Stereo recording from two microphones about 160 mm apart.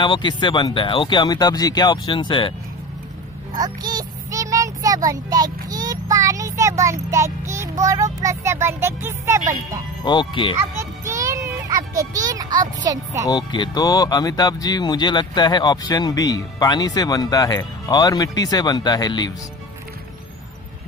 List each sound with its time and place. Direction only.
0.0 s speech: 30° left (ahead or behind)
3.5 s a child's voice: 25° right (ahead or behind)
10.0 s speech: 30° left (ahead or behind)
10.8 s music: 20° right (ahead or behind)
12.0 s a child's voice: 20° right (ahead or behind)
13.3 s speech: 30° left (ahead or behind)